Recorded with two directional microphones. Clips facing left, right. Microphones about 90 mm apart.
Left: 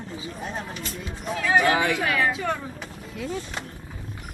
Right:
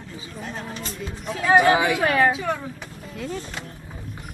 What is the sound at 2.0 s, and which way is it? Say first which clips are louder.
Speech: right 5 dB; 40° right (ahead or behind).